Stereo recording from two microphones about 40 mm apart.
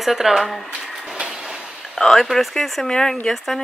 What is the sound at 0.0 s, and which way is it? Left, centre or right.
Speech, centre.